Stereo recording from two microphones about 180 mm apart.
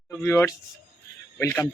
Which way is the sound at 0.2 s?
15° left (ahead or behind).